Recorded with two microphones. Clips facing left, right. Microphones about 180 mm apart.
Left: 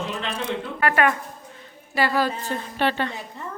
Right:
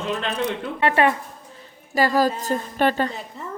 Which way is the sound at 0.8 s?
25° right (ahead or behind).